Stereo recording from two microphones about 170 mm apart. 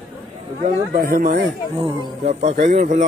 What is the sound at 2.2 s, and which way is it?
Speech, 40° right (ahead or behind).